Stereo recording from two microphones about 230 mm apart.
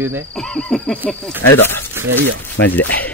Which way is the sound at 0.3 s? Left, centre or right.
Centre.